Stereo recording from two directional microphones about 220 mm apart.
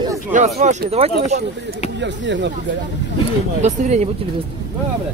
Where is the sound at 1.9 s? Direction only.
55° right (ahead or behind).